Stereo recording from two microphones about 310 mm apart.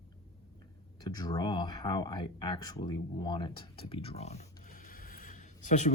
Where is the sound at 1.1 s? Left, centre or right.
Centre.